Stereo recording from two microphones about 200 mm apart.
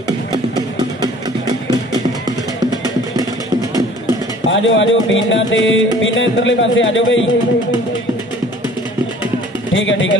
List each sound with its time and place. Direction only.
0.6 s a sound: 20° right (ahead or behind)
4.5 s music: 70° left (ahead or behind)
9.8 s music: 70° left (ahead or behind)